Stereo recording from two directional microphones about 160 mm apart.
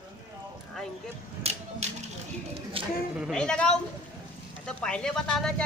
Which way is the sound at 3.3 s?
5° left (ahead or behind).